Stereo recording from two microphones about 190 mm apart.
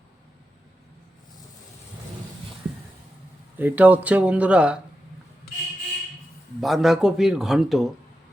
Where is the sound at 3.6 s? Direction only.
10° right (ahead or behind).